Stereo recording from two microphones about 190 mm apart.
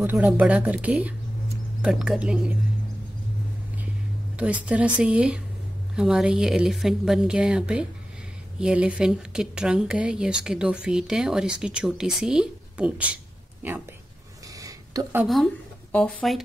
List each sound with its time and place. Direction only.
0.0 s speech: 10° right (ahead or behind)
4.4 s speech: 5° right (ahead or behind)
14.6 s a sound: 20° right (ahead or behind)
15.9 s speech: 5° left (ahead or behind)